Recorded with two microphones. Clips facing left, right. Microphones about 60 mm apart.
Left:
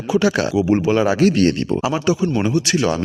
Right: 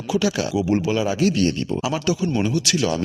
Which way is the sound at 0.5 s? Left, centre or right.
Left.